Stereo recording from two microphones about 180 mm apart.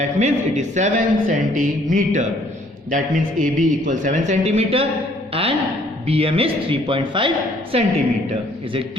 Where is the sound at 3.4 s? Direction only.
45° right (ahead or behind).